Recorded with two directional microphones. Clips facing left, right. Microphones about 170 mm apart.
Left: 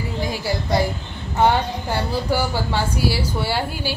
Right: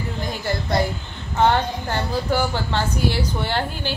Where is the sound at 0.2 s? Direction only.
10° left (ahead or behind).